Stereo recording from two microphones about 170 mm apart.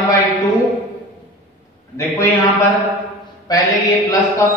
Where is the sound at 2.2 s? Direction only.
20° left (ahead or behind).